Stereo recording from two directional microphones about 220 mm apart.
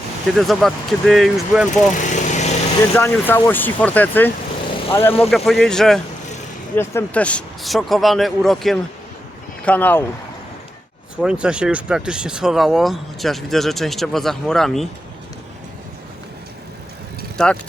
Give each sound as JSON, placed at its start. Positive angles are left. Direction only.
{"t": 0.3, "sound": "speech", "side_deg": 0}
{"t": 2.0, "sound": "vehicle", "side_deg": 35}
{"t": 2.9, "sound": "speech", "side_deg": 10}
{"t": 5.3, "sound": "speech", "side_deg": 0}
{"t": 11.2, "sound": "speech", "side_deg": -5}
{"t": 17.3, "sound": "speech", "side_deg": 5}